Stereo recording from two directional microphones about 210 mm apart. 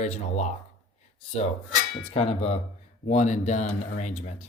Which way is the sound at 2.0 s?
30° left (ahead or behind).